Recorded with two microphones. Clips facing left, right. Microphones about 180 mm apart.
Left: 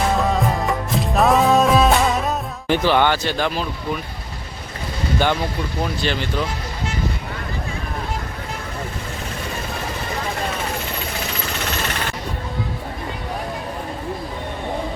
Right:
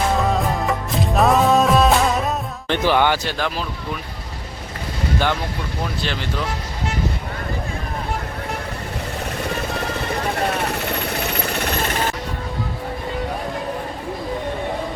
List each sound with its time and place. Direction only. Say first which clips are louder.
0.2 s music: even; centre (ahead or behind)
2.8 s speech: right 1 dB; 10° right (ahead or behind)
5.2 s speech: left 4 dB; centre (ahead or behind)
11.3 s a sound: right 3 dB; 55° right (ahead or behind)